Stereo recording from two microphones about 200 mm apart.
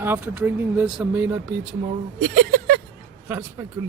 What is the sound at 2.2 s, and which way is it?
Speech, 50° right (ahead or behind).